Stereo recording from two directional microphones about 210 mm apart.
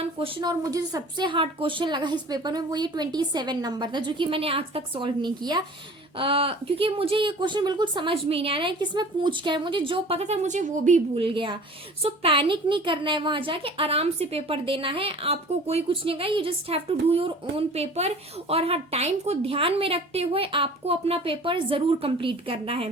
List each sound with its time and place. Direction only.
0.0 s a woman's voice: 25° right (ahead or behind)